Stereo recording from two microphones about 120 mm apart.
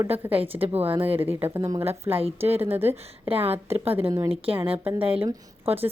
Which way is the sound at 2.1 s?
55° right (ahead or behind).